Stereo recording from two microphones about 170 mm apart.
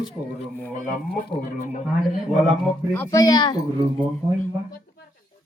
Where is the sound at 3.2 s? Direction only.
25° left (ahead or behind).